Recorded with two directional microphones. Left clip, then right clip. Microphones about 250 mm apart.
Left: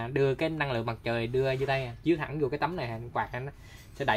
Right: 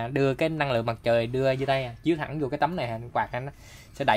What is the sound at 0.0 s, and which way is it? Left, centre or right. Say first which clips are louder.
Speech: right 3 dB; right.